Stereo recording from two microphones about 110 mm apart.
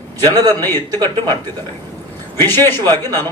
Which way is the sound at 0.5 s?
20° left (ahead or behind).